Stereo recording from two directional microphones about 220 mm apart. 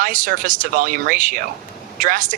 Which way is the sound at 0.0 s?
40° right (ahead or behind).